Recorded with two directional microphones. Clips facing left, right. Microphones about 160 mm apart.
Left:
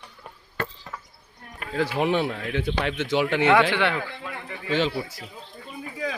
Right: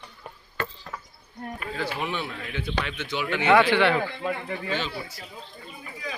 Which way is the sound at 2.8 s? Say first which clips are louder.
Left 7 dB; 90° left.